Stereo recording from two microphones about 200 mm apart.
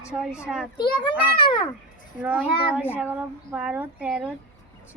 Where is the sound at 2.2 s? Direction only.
10° right (ahead or behind).